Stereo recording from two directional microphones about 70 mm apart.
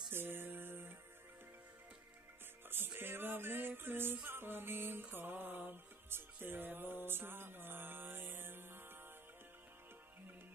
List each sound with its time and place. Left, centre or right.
0.1 s music: right
2.7 s music: right